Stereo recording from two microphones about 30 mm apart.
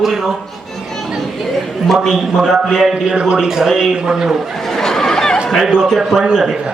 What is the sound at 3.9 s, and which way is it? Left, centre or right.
Speech, right.